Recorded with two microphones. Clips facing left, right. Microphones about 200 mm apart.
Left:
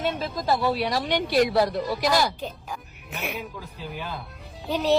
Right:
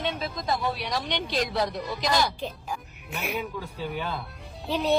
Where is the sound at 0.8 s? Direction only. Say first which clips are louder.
Left 5 dB; 55° left (ahead or behind).